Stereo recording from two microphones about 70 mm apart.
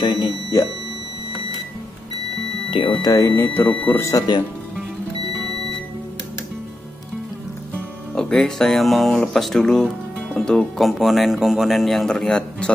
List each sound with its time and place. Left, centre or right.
0.0 s speech: left
3.0 s speech: left
3.3 s speech: left
4.3 s speech: left
8.1 s speech: centre
12.1 s a man's voice: centre